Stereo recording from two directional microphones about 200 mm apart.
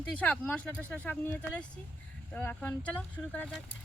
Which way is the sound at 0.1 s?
5° left (ahead or behind).